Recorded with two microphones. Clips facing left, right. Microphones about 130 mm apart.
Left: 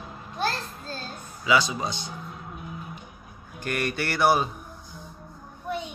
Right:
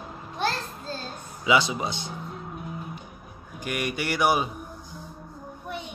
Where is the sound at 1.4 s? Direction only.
20° right (ahead or behind).